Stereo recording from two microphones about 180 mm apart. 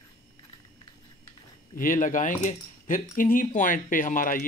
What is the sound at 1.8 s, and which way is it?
Speech, 50° left (ahead or behind).